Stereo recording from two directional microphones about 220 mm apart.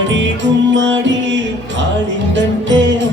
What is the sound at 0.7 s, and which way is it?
Music, 55° right (ahead or behind).